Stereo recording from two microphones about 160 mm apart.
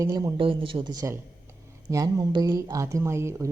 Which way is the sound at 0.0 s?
20° right (ahead or behind).